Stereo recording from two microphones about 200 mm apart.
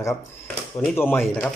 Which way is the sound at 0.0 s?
15° left (ahead or behind).